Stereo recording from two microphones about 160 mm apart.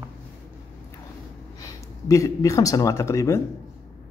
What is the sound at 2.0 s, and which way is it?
Speech, 20° left (ahead or behind).